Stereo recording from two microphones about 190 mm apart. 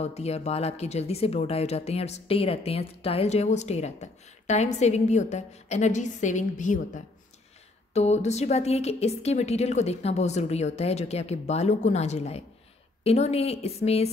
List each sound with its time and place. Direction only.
0.0 s speech: 35° left (ahead or behind)